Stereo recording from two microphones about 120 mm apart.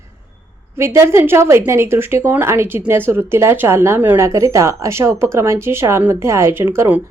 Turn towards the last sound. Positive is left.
turn(degrees=-20)  # may be behind; listen again after turning